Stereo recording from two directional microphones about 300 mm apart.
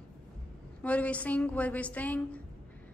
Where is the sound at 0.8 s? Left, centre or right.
Centre.